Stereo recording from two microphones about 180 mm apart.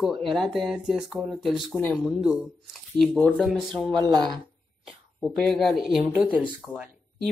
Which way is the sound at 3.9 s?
25° right (ahead or behind).